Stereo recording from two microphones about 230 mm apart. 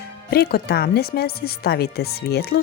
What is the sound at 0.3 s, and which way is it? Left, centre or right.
Speech, left.